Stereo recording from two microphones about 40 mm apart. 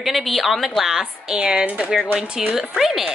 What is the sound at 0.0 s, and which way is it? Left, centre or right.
A woman's voice, centre.